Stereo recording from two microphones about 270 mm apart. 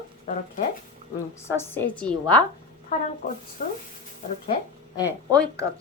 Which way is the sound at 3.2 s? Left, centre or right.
Left.